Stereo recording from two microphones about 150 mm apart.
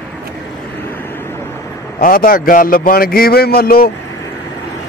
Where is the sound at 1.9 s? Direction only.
70° left (ahead or behind).